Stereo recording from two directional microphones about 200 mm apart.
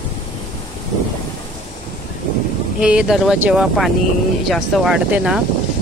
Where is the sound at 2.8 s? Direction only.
5° right (ahead or behind).